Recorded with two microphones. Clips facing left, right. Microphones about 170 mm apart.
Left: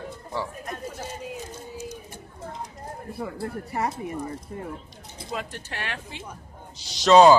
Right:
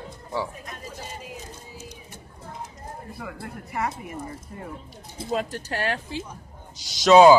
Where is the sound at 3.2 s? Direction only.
35° left (ahead or behind).